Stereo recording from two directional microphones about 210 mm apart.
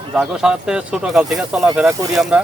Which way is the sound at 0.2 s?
5° right (ahead or behind).